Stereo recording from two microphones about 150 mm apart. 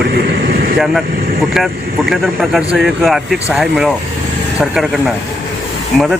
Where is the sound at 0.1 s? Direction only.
90° right.